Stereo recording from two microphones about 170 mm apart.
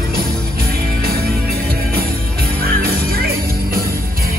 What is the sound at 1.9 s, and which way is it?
Music, 65° right (ahead or behind).